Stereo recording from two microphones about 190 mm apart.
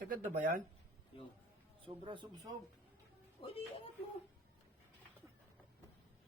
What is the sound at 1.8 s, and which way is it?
Speech, 25° right (ahead or behind).